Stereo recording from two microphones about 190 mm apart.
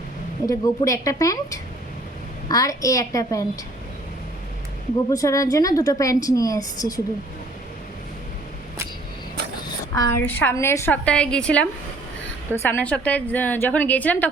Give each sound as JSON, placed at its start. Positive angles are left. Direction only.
{"t": 0.4, "sound": "a woman's voice", "side_deg": 20}
{"t": 5.1, "sound": "a woman's voice", "side_deg": 15}
{"t": 9.9, "sound": "a woman's voice", "side_deg": 15}